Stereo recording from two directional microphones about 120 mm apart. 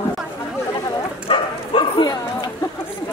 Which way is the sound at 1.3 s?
40° left (ahead or behind).